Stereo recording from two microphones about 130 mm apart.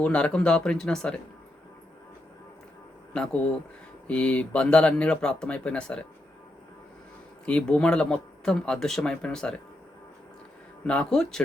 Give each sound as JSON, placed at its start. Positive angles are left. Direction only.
{"t": 0.0, "sound": "speech", "side_deg": 10}
{"t": 4.0, "sound": "speech", "side_deg": 10}
{"t": 7.4, "sound": "speech", "side_deg": 10}
{"t": 10.8, "sound": "speech", "side_deg": 5}